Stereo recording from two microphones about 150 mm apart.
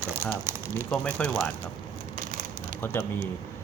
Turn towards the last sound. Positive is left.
turn(degrees=15)  # may be behind; listen again after turning